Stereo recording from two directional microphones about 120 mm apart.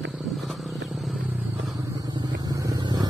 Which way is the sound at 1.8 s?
35° right (ahead or behind).